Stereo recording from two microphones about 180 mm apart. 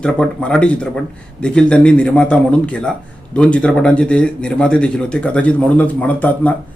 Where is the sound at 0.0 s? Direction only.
5° left (ahead or behind).